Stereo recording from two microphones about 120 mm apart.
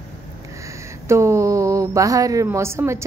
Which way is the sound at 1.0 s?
25° right (ahead or behind).